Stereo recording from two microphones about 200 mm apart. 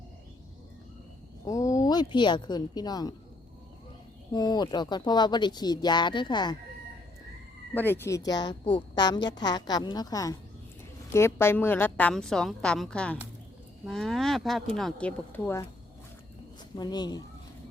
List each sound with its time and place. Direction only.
1.5 s speech: 15° left (ahead or behind)
4.3 s a woman's voice: 20° left (ahead or behind)
7.7 s a woman's voice: 10° left (ahead or behind)
16.7 s a woman's voice: 20° left (ahead or behind)